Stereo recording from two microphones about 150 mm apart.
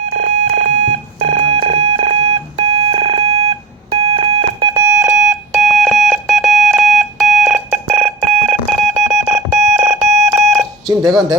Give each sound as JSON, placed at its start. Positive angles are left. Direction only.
{"t": 0.2, "sound": "alarm clock", "side_deg": -50}
{"t": 4.9, "sound": "music", "side_deg": -5}